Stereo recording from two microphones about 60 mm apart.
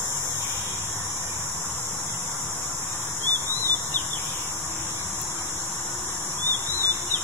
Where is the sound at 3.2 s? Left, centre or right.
Left.